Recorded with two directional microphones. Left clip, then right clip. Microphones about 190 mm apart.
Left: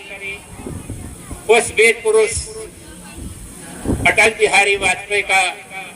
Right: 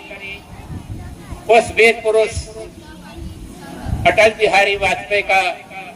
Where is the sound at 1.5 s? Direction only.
55° left (ahead or behind).